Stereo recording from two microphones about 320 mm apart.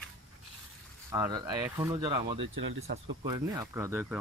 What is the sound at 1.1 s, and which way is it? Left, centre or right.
Speech, centre.